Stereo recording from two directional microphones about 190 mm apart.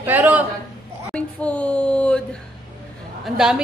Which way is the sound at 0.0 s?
10° right (ahead or behind).